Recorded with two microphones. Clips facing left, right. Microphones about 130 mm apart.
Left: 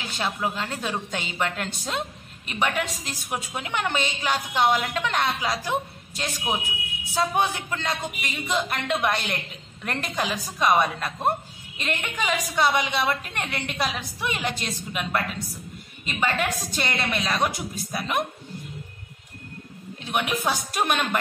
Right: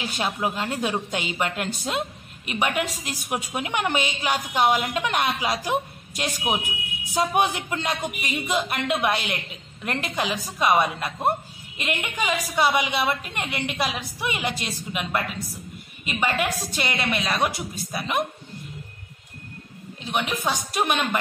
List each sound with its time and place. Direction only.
0.1 s a woman's voice: 15° right (ahead or behind)
20.0 s a woman's voice: centre (ahead or behind)